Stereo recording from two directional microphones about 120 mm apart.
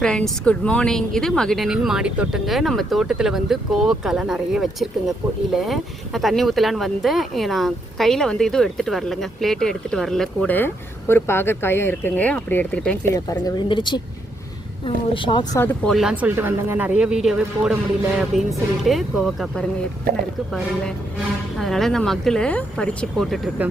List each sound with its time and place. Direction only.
0.0 s speech: 5° left (ahead or behind)
11.1 s speech: 20° left (ahead or behind)
13.4 s speech: 40° left (ahead or behind)
15.5 s speech: 15° left (ahead or behind)
15.9 s speech: centre (ahead or behind)
16.1 s speech: 15° right (ahead or behind); by 23.4 s centre (ahead or behind)
23.6 s speech: 15° right (ahead or behind)